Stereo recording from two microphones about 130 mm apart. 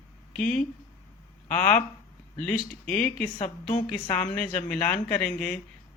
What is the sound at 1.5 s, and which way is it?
Speech, 75° left (ahead or behind).